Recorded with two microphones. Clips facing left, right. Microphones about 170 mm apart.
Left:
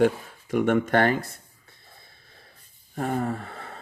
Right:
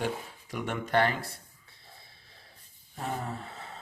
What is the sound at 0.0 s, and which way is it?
Speech, 55° left (ahead or behind).